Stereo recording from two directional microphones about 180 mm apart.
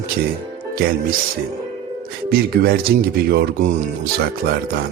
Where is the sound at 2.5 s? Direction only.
60° right (ahead or behind).